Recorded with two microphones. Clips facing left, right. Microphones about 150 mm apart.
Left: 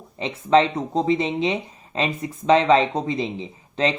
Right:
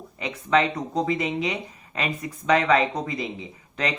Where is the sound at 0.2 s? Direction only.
30° left (ahead or behind).